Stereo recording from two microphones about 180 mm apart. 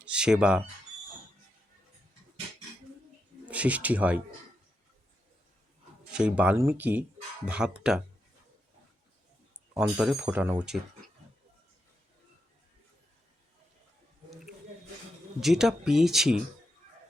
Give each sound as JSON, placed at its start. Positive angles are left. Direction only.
{"t": 0.0, "sound": "speech", "side_deg": -5}
{"t": 3.4, "sound": "speech", "side_deg": -5}
{"t": 6.1, "sound": "speech", "side_deg": -5}
{"t": 9.7, "sound": "speech", "side_deg": -5}
{"t": 15.4, "sound": "speech", "side_deg": 0}